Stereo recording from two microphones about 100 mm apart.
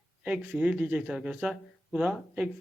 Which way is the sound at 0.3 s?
15° right (ahead or behind).